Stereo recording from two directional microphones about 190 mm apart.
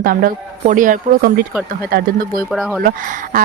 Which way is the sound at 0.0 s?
50° right (ahead or behind).